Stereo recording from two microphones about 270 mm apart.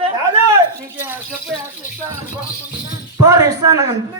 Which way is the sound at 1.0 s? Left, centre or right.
Centre.